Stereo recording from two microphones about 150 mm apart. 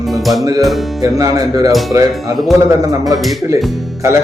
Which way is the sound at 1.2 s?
25° right (ahead or behind).